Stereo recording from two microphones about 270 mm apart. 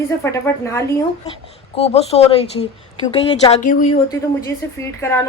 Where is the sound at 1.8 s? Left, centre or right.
Left.